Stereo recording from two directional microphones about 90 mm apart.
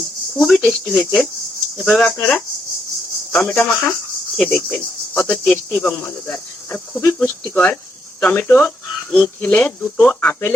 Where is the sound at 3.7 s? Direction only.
5° left (ahead or behind).